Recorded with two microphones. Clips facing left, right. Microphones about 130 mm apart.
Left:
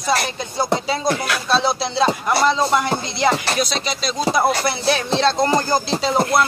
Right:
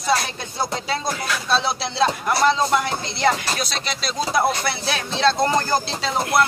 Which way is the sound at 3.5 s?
Centre (ahead or behind).